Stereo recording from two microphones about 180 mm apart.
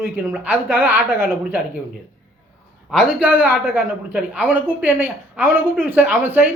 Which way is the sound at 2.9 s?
5° right (ahead or behind).